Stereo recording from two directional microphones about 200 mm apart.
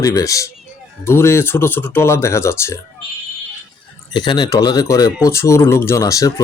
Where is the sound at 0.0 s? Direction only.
15° left (ahead or behind).